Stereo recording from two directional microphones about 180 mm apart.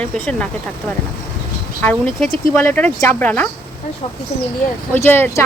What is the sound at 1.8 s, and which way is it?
Speech, 5° left (ahead or behind).